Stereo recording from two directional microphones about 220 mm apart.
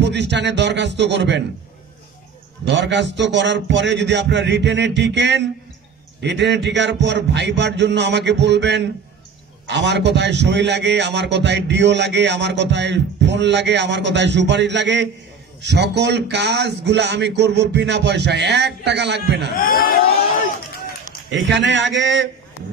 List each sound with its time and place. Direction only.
0.0 s a man's voice: 50° right (ahead or behind)
2.6 s a man's voice: 55° right (ahead or behind)
19.6 s speech: 40° left (ahead or behind)
21.3 s a man's voice: 55° right (ahead or behind)